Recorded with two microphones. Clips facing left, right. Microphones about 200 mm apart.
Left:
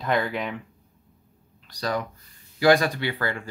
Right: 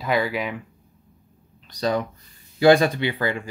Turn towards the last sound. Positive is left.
turn(degrees=-20)  # may be behind; listen again after turning